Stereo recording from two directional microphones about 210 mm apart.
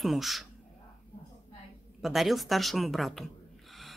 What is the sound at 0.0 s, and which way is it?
Speech, centre (ahead or behind).